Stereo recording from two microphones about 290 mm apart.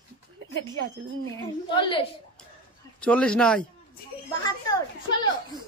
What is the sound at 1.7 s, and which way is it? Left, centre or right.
Speech, centre.